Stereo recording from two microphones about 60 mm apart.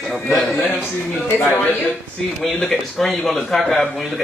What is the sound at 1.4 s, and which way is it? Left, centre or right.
Speech, left.